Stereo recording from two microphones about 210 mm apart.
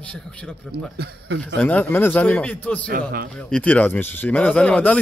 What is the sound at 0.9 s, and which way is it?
Speech, 50° right (ahead or behind).